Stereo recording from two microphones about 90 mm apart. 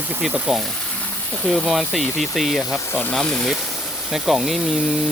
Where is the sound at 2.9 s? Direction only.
20° left (ahead or behind).